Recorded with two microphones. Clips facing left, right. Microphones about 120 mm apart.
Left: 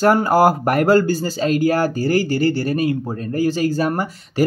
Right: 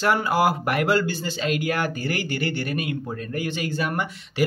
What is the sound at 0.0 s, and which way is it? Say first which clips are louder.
Speech: left 7 dB; 40° left (ahead or behind).